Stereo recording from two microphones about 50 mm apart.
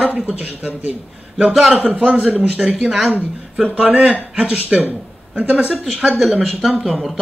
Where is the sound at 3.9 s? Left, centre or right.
Right.